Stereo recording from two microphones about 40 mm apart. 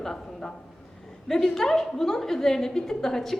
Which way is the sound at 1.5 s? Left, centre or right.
Centre.